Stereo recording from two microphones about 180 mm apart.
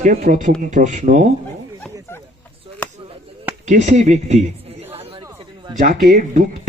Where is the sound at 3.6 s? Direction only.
40° right (ahead or behind).